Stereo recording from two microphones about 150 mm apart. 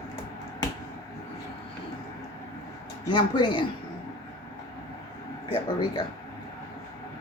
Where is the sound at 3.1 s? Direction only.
30° left (ahead or behind).